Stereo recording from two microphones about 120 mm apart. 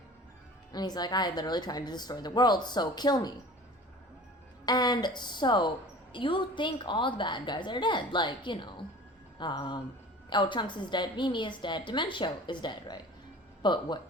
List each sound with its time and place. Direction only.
0.7 s a woman's voice: 35° left (ahead or behind)
4.6 s a woman's voice: 35° left (ahead or behind)